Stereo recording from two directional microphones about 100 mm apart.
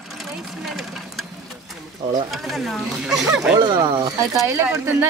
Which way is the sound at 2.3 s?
Centre (ahead or behind).